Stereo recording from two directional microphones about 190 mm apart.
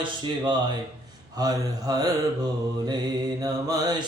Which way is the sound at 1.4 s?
20° right (ahead or behind).